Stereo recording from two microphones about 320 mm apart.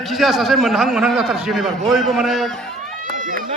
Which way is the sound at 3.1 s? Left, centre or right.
Right.